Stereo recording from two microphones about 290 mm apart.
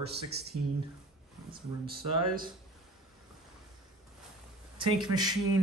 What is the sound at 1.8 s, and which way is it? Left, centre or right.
Speech, right.